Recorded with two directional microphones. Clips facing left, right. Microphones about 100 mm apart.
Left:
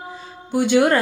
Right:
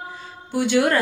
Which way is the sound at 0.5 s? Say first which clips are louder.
Left 3 dB; 20° left (ahead or behind).